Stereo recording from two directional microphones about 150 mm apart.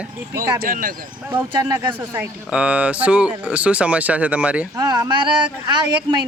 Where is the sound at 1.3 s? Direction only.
10° right (ahead or behind).